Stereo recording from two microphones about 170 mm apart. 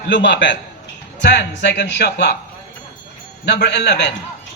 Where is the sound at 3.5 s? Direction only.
85° left.